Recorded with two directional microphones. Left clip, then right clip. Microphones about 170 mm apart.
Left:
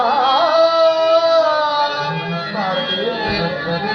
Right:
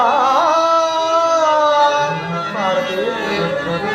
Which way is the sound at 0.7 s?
30° left (ahead or behind).